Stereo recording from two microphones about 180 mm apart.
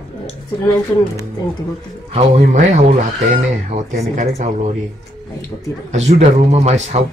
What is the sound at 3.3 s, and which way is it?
Speech, 40° right (ahead or behind).